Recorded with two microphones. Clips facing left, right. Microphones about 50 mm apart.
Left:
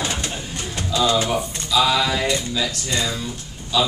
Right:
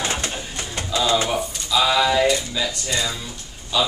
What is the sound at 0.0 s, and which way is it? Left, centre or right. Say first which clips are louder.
Bird: right 1 dB; right.